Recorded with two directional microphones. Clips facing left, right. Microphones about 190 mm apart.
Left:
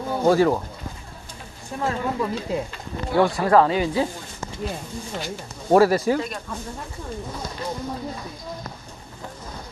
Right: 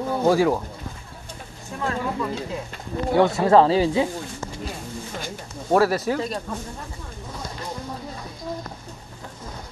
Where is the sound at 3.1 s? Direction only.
20° right (ahead or behind).